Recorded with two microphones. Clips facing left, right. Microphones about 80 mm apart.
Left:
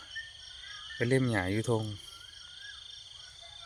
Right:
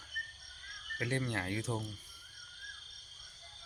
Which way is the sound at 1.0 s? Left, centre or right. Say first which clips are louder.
Left 8 dB; left.